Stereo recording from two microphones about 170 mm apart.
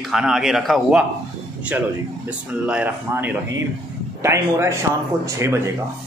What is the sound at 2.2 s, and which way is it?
Speech, 5° right (ahead or behind).